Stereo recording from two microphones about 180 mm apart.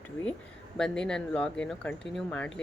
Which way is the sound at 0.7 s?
5° left (ahead or behind).